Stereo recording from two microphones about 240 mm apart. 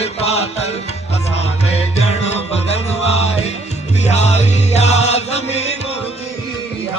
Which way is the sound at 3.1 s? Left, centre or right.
Left.